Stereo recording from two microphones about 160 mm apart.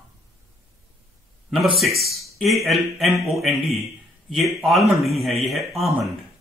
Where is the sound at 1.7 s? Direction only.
Centre (ahead or behind).